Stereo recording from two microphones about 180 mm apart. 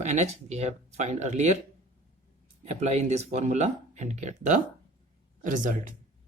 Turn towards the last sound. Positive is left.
turn(degrees=-45)  # may be behind; listen again after turning